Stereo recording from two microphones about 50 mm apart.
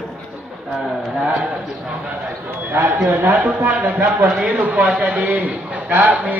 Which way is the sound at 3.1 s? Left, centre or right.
Right.